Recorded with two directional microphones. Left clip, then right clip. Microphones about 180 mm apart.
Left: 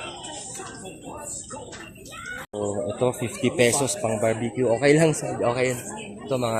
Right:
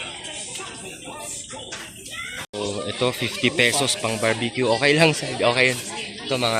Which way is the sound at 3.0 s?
5° left (ahead or behind).